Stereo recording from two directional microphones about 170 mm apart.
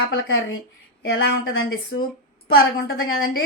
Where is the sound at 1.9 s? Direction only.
90° left.